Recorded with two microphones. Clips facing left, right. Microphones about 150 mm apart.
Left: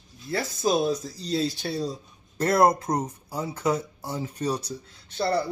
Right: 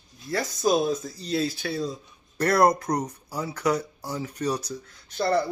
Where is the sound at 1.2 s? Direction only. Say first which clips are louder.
Right 1 dB; 60° right (ahead or behind).